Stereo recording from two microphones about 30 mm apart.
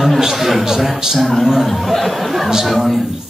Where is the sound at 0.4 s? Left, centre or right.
Centre.